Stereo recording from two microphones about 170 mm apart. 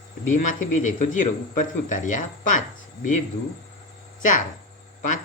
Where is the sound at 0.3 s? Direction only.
50° left (ahead or behind).